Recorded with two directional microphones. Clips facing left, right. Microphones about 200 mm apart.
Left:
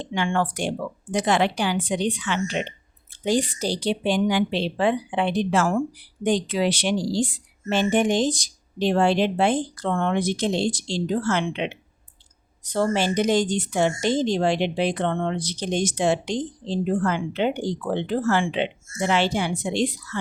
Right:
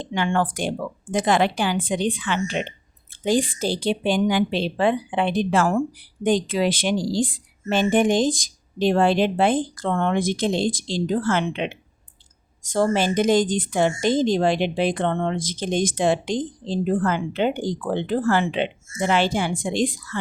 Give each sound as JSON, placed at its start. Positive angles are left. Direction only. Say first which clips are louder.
{"t": 0.0, "sound": "a woman's voice", "louder": "right 1 dB", "side_deg": -45}